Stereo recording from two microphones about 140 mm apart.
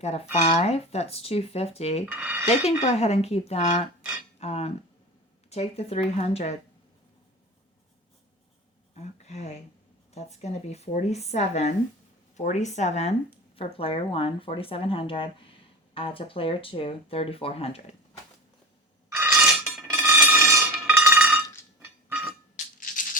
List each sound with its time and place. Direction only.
0.3 s speech: 50° left (ahead or behind)
2.0 s speech: 10° right (ahead or behind)
2.5 s speech: 50° left (ahead or behind)
9.0 s speech: 50° left (ahead or behind)
19.1 s a sound: 20° right (ahead or behind)
19.9 s chink: 15° right (ahead or behind)